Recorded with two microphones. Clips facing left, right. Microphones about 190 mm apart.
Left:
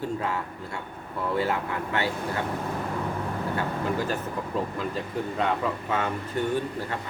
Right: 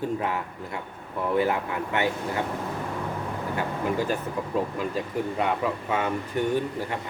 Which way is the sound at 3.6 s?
15° right (ahead or behind).